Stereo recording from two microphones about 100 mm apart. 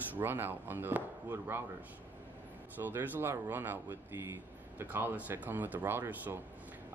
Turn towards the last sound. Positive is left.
turn(degrees=-20)  # may be behind; listen again after turning